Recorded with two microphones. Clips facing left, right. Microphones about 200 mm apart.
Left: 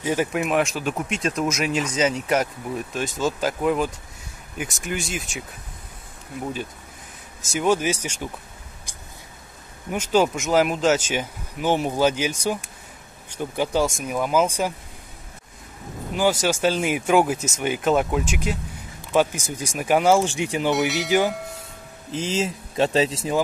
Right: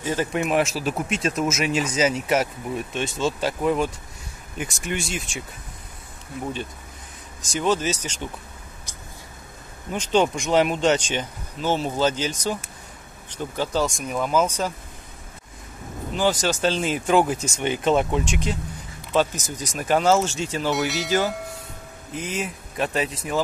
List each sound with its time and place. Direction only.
0.0 s speech: 10° left (ahead or behind)
7.5 s speech: 10° left (ahead or behind)
9.8 s speech: 5° left (ahead or behind)
16.2 s speech: 10° left (ahead or behind)
22.1 s speech: 25° left (ahead or behind)